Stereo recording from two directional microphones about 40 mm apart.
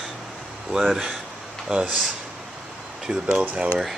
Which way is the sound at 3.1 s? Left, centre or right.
Right.